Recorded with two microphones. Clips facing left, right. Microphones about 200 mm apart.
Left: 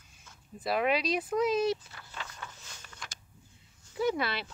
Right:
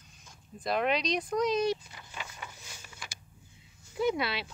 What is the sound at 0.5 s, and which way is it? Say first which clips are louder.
Speech: left 1 dB; 5° left (ahead or behind).